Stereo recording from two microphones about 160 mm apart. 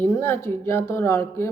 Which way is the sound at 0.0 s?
15° left (ahead or behind).